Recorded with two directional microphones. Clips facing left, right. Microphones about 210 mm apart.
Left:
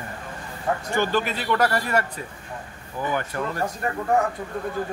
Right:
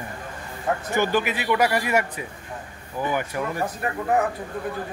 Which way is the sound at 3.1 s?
10° right (ahead or behind).